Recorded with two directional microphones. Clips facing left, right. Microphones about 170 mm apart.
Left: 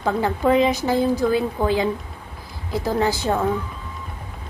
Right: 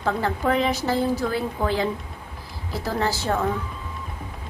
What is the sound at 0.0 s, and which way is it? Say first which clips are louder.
A woman's voice: left 3 dB; 15° left (ahead or behind).